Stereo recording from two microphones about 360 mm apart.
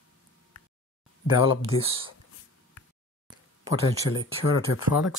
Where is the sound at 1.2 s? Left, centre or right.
Centre.